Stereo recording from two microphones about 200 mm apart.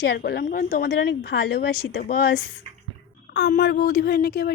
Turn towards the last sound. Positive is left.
turn(degrees=50)  # may be behind; listen again after turning